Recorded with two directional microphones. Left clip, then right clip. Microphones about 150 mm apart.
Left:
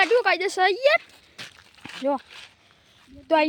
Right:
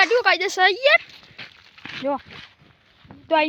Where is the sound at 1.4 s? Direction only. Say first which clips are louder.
Even; 5° right (ahead or behind).